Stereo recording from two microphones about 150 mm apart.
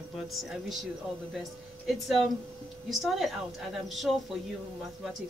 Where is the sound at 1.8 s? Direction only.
Centre (ahead or behind).